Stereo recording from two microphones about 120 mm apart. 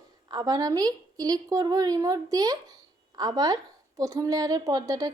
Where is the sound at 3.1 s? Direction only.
30° right (ahead or behind).